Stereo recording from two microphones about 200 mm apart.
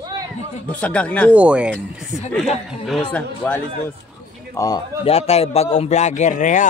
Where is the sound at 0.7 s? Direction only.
5° left (ahead or behind).